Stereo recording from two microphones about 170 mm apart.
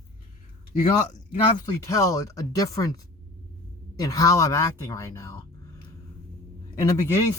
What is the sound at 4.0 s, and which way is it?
Speech, 20° left (ahead or behind).